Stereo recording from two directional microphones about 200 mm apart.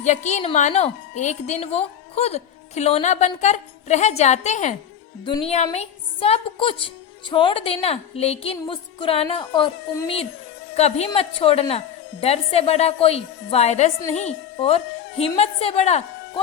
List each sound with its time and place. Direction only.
0.0 s a woman's voice: 35° left (ahead or behind)